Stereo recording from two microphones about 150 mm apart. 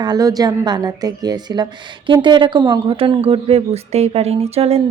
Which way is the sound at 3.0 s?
40° right (ahead or behind).